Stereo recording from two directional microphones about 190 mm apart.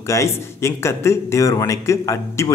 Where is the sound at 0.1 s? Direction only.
15° left (ahead or behind).